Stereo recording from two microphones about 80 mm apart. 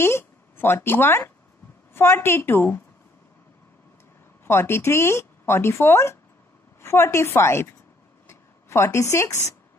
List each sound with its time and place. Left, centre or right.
0.0 s speech: left
4.5 s speech: left